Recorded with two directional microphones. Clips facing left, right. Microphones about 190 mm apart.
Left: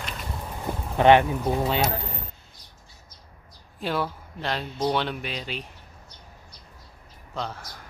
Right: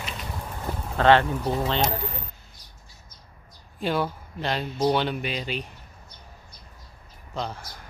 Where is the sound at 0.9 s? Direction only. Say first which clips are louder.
Left 2 dB; 15° left (ahead or behind).